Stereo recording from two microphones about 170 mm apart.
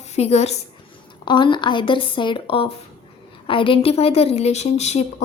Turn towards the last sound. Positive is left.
turn(degrees=40)  # may be behind; listen again after turning